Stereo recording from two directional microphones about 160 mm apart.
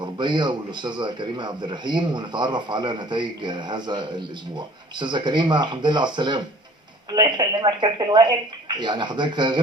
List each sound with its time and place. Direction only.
0.0 s a man's voice: 30° right (ahead or behind)